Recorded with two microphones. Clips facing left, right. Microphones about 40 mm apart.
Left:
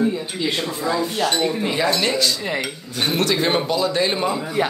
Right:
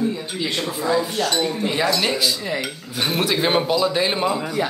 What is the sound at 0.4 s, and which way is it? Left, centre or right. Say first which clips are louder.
Speech: right 1 dB; centre.